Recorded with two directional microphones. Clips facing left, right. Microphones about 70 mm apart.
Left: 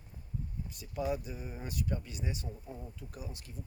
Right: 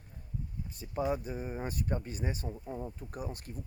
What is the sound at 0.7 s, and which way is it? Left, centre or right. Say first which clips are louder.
Speech: right 2 dB; right.